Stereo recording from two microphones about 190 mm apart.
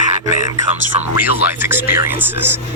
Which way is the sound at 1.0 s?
10° right (ahead or behind).